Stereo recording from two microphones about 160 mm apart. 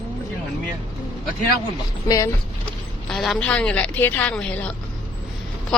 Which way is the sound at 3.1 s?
Centre (ahead or behind).